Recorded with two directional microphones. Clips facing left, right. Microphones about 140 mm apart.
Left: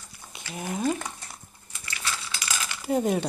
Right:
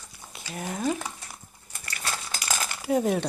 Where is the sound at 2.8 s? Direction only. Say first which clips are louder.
Even; centre (ahead or behind).